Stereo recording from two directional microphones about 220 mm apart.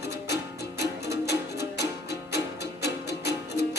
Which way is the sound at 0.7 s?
50° left (ahead or behind).